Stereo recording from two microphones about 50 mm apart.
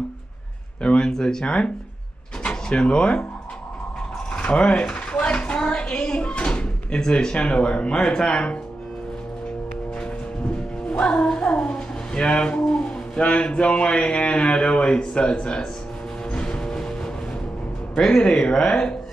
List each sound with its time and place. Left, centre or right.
0.8 s speech: centre
4.3 s a sound: left
7.0 s speech: centre
10.9 s speech: left
16.3 s music: centre
17.9 s speech: centre